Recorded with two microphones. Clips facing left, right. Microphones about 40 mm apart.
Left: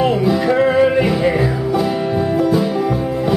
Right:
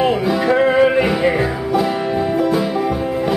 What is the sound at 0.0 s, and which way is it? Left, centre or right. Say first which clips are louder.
Music: left 1 dB; centre.